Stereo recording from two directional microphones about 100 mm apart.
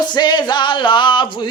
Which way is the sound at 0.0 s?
45° left (ahead or behind).